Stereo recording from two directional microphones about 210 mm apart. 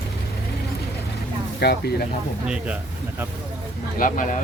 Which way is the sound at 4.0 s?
40° left (ahead or behind).